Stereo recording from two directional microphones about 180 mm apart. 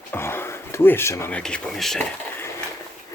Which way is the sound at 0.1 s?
15° left (ahead or behind).